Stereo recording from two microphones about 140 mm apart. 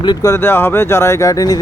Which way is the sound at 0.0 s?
25° left (ahead or behind).